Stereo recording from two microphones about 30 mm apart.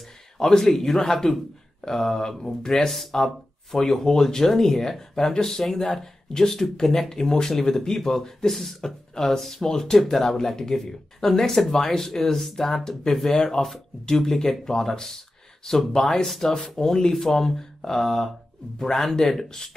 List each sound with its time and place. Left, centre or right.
0.4 s speech: centre
2.7 s speech: centre